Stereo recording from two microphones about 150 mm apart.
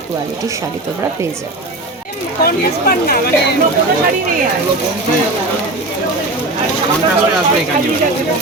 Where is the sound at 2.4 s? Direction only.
90° left.